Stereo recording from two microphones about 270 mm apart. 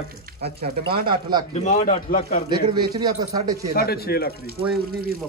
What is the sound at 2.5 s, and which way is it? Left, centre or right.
A man's voice, centre.